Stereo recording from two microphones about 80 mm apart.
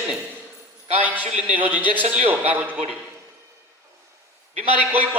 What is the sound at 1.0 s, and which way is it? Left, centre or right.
A man's voice, right.